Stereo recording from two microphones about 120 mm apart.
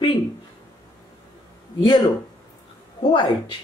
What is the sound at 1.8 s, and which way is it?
A woman's voice, 45° left (ahead or behind).